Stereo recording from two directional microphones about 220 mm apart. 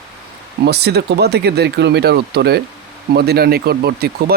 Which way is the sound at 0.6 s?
50° right (ahead or behind).